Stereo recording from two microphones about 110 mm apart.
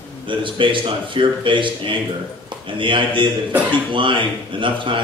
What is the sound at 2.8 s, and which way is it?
Speech, 50° right (ahead or behind).